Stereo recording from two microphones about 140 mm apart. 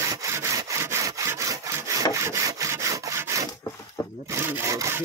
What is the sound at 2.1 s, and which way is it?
Wood, 20° right (ahead or behind).